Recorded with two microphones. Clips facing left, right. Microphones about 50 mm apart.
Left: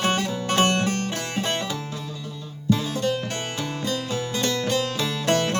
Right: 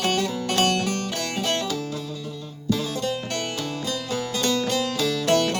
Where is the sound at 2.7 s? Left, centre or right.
Left.